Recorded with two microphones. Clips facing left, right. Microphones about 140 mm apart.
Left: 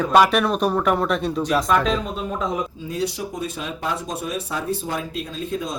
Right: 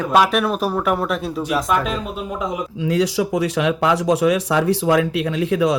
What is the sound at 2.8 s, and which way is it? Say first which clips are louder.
Speech: right 7 dB; 90° right.